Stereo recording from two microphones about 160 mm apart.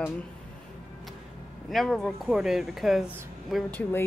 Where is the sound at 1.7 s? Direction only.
Centre (ahead or behind).